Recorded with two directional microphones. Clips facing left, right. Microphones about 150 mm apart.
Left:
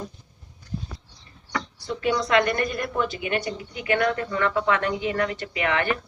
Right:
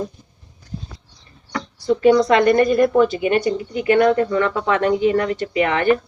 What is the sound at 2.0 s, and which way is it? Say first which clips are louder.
Speech: right 8 dB; 40° right (ahead or behind).